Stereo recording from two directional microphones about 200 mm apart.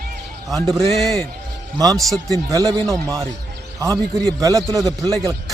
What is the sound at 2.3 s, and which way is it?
A man's voice, 15° right (ahead or behind).